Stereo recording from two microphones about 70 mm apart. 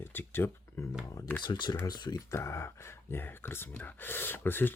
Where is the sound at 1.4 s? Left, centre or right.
Left.